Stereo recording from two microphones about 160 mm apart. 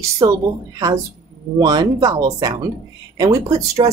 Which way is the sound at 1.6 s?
25° right (ahead or behind).